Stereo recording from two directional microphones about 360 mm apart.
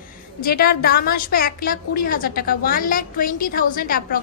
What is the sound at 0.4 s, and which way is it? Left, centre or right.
A woman's voice, left.